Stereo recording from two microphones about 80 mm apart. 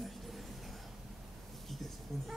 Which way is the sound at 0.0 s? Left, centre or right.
Centre.